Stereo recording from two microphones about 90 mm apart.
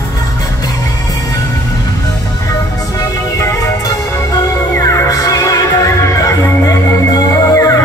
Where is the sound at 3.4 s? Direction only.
35° left (ahead or behind).